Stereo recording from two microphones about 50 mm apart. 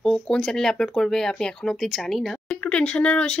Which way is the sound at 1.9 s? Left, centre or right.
Centre.